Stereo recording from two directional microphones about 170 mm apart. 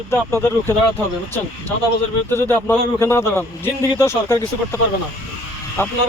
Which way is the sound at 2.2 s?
15° left (ahead or behind).